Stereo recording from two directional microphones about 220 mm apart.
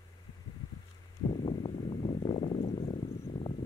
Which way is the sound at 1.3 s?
20° left (ahead or behind).